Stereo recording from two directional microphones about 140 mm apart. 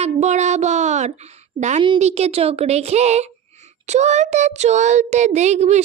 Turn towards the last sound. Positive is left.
turn(degrees=-55)  # may be behind; listen again after turning